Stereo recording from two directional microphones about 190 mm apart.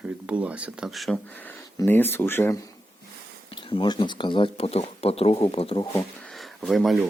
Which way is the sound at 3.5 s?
25° left (ahead or behind).